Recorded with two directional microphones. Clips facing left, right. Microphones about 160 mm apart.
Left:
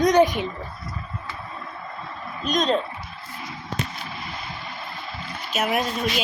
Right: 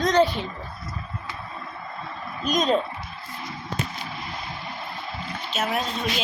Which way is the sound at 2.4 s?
Centre (ahead or behind).